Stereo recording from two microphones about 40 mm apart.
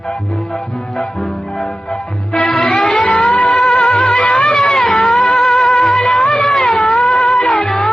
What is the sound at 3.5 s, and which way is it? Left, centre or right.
Music, centre.